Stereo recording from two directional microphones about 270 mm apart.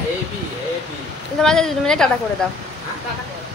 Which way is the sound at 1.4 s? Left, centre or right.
Centre.